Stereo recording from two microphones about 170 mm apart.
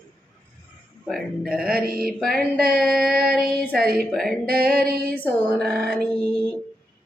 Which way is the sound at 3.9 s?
Centre (ahead or behind).